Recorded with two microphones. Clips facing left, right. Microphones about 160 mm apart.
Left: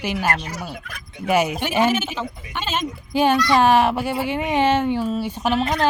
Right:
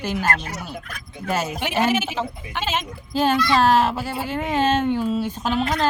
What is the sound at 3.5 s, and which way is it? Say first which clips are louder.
Speech: left 1 dB; 15° left (ahead or behind).